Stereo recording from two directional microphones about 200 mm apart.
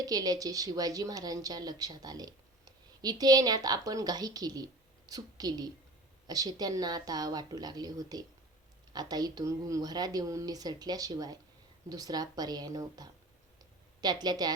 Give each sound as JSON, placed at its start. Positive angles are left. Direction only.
{"t": 0.0, "sound": "a woman's voice", "side_deg": -20}